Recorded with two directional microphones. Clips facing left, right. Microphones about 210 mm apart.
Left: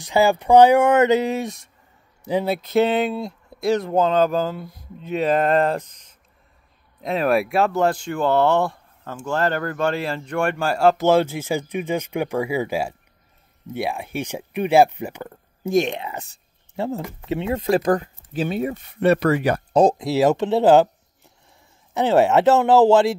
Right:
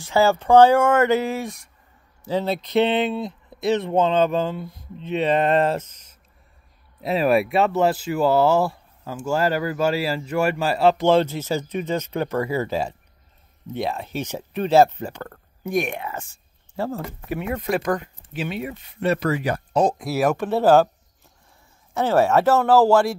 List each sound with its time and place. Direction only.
0.0 s speech: 15° left (ahead or behind)
2.2 s speech: 10° left (ahead or behind)
7.0 s speech: 5° right (ahead or behind); by 15.3 s 10° left (ahead or behind)
15.6 s speech: 25° left (ahead or behind)
18.9 s speech: 60° left (ahead or behind)
19.7 s speech: 30° left (ahead or behind)
21.9 s speech: 20° left (ahead or behind)